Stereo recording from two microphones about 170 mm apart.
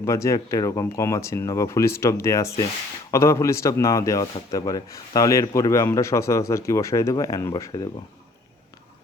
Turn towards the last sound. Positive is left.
turn(degrees=20)  # may be behind; listen again after turning